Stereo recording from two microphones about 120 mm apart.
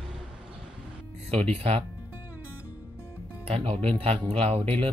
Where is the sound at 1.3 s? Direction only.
55° right (ahead or behind).